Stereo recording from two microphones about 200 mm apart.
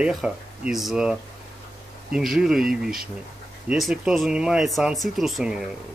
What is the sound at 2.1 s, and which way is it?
Speech, centre (ahead or behind).